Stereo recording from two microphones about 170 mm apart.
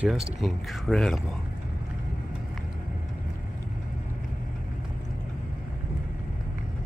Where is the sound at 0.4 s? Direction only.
Centre (ahead or behind).